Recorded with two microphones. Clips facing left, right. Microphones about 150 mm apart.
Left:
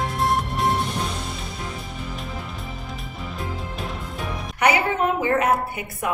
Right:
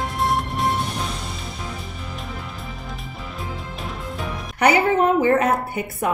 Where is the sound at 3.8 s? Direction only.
Centre (ahead or behind).